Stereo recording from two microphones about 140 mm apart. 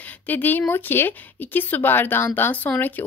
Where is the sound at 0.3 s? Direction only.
15° left (ahead or behind).